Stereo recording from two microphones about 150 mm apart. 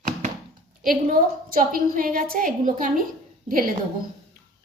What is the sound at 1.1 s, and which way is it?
A woman's voice, 65° right (ahead or behind).